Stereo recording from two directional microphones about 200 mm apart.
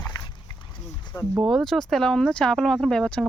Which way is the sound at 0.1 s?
20° left (ahead or behind).